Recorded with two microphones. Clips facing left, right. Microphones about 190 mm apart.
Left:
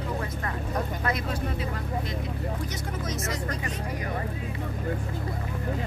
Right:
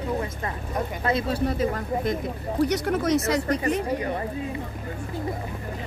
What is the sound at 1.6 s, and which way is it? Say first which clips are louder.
Speech: right 7 dB; 45° right (ahead or behind).